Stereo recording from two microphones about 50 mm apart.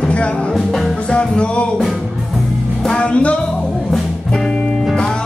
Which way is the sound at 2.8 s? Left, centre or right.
Centre.